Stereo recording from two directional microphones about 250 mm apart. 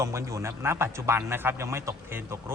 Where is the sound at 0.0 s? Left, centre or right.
Centre.